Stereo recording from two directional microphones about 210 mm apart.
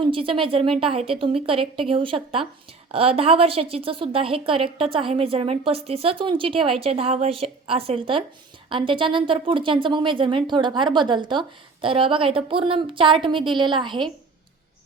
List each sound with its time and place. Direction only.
0.0 s a woman's voice: 25° right (ahead or behind)